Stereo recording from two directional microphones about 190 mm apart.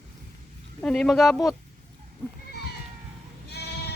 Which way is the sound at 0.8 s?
Centre (ahead or behind).